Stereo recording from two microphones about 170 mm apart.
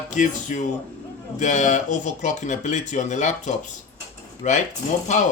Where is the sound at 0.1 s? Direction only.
45° left (ahead or behind).